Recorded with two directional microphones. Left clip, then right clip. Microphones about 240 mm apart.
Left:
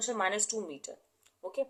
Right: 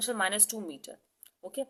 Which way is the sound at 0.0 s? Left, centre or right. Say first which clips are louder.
Right 1 dB; right.